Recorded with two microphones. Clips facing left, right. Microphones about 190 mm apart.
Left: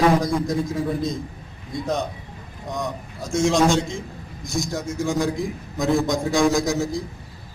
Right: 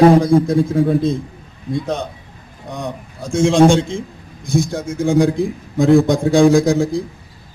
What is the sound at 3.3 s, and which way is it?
Speech, 55° right (ahead or behind).